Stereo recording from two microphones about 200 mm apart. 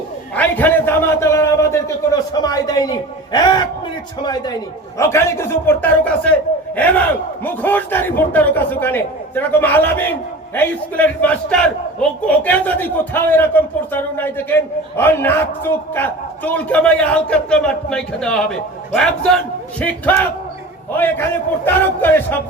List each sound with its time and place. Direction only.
0.3 s a man's voice: 10° left (ahead or behind)
4.9 s a man's voice: 15° left (ahead or behind)